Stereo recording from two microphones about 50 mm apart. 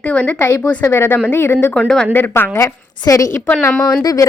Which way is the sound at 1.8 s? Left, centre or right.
Centre.